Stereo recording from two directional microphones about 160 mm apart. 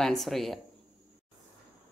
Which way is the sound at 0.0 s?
Centre (ahead or behind).